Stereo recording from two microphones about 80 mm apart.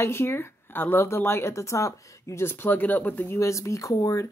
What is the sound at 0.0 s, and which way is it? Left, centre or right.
Speech, left.